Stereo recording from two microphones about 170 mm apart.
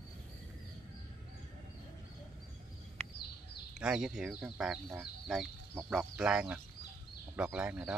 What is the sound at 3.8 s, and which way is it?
Speech, 5° right (ahead or behind).